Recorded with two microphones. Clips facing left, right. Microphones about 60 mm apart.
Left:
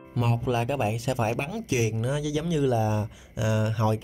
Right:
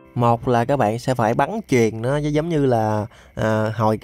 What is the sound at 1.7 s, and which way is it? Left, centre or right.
Speech, right.